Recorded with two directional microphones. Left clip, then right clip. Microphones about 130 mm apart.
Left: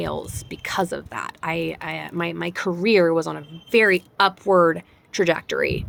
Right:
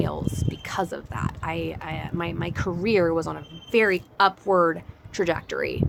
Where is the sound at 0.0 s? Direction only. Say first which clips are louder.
Left 1 dB; 50° left (ahead or behind).